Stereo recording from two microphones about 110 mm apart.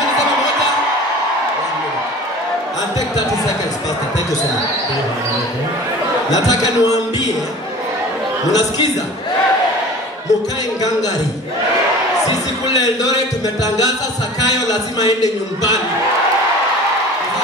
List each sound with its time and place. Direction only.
6.3 s speech: 35° left (ahead or behind)
8.5 s speech: 35° left (ahead or behind)
12.7 s speech: 35° left (ahead or behind)
14.5 s speech: 40° left (ahead or behind)